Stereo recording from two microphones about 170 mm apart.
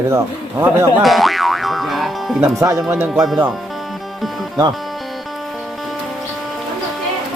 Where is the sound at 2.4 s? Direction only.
20° right (ahead or behind).